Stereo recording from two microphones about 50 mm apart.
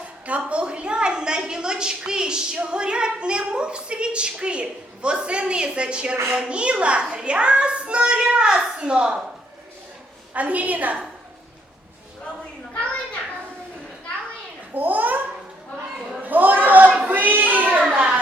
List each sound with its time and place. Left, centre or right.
0.0 s a woman's voice: right
10.3 s a woman's voice: right
14.7 s a child's voice: right
16.2 s a sound: right